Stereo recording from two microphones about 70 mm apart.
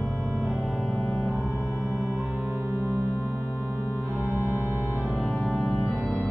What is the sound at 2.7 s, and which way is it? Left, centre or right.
Organ, left.